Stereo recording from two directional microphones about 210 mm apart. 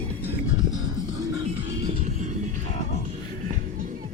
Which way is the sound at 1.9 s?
35° right (ahead or behind).